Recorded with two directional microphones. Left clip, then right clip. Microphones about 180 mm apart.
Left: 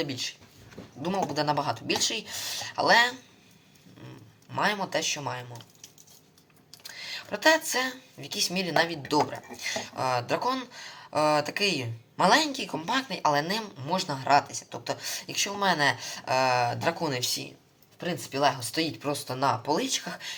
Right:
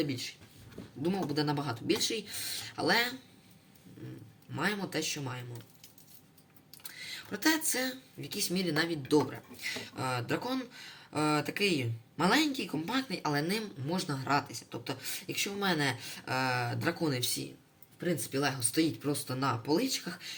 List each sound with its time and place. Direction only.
1.0 s speech: 10° right (ahead or behind)
4.5 s speech: 10° right (ahead or behind)
6.8 s a sound: 15° right (ahead or behind)
8.4 s speech: 15° right (ahead or behind)
11.5 s speech: 45° left (ahead or behind)
12.2 s speech: 10° right (ahead or behind)